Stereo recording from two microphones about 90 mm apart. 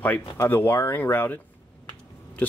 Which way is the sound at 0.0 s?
20° left (ahead or behind).